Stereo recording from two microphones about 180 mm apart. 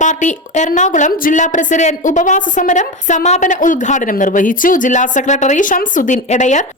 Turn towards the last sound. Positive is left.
turn(degrees=40)  # may be behind; listen again after turning